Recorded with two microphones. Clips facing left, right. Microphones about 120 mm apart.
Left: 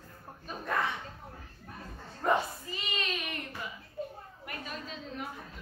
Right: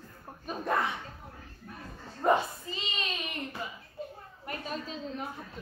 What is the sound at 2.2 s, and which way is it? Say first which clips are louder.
Speech: right 3 dB; 25° right (ahead or behind).